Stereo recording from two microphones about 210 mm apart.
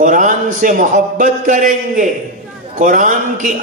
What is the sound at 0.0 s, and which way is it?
A man's voice, 40° right (ahead or behind).